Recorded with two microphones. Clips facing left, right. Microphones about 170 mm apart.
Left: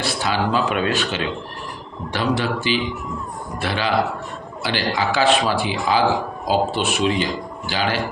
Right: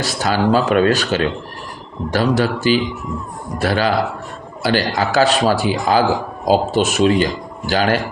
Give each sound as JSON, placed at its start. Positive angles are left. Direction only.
{"t": 0.0, "sound": "a man's voice", "side_deg": -40}